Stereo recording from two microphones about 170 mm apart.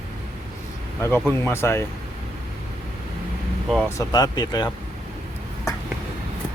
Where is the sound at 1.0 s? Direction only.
15° left (ahead or behind).